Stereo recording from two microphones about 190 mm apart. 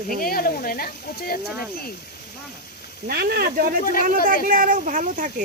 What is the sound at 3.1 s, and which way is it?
Speech, 55° right (ahead or behind).